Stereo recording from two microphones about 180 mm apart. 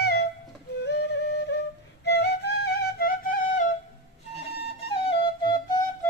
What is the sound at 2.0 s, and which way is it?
Flute, 70° left (ahead or behind).